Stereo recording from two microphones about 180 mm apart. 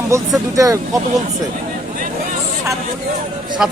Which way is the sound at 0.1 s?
15° right (ahead or behind).